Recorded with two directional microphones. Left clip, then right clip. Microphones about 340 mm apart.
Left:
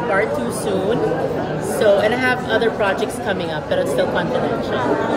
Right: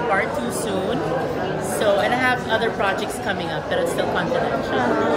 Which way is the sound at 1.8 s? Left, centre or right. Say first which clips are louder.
Left 4 dB; centre.